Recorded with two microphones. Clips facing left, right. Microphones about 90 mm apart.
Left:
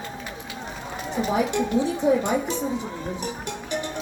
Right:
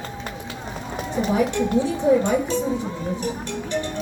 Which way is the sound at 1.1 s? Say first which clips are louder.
Right 2 dB; 15° left (ahead or behind).